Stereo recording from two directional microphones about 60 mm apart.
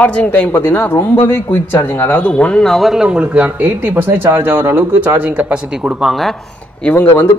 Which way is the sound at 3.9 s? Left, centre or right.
Right.